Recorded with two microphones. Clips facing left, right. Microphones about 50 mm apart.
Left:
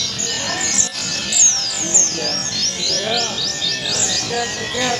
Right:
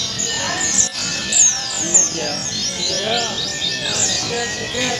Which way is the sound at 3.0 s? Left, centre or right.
Centre.